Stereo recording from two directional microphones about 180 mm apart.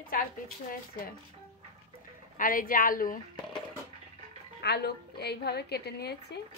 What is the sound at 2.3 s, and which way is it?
Speech, 50° left (ahead or behind).